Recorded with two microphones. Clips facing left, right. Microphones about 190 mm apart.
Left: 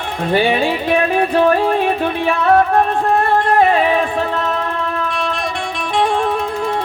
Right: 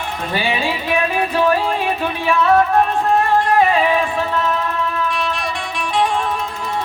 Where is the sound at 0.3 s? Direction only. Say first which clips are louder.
Left 6 dB; 55° left (ahead or behind).